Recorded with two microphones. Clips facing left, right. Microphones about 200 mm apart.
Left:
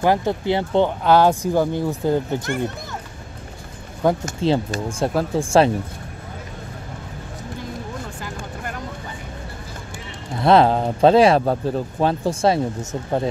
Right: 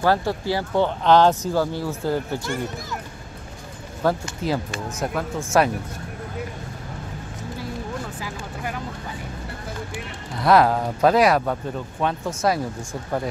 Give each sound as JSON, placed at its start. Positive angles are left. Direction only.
{"t": 0.0, "sound": "speech", "side_deg": 20}
{"t": 1.0, "sound": "speech", "side_deg": 10}
{"t": 2.4, "sound": "speech", "side_deg": 55}
{"t": 4.0, "sound": "speech", "side_deg": 20}
{"t": 10.3, "sound": "speech", "side_deg": 25}